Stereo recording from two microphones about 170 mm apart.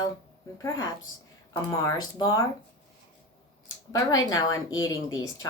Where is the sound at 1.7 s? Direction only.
20° left (ahead or behind).